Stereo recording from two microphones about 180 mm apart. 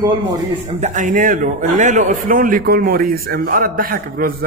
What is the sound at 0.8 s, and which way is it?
A man's voice, 45° right (ahead or behind).